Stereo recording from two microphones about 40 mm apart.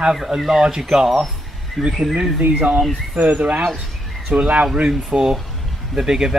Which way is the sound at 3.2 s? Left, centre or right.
Right.